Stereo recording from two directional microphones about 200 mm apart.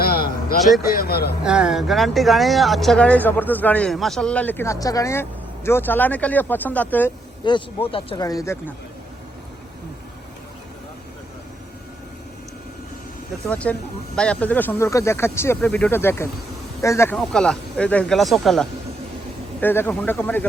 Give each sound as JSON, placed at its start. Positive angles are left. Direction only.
{"t": 0.0, "sound": "a sound", "side_deg": 50}
{"t": 0.8, "sound": "speech", "side_deg": 50}
{"t": 1.5, "sound": "speech", "side_deg": -5}
{"t": 7.4, "sound": "speech", "side_deg": 25}
{"t": 13.5, "sound": "speech", "side_deg": 5}
{"t": 17.2, "sound": "speech", "side_deg": 5}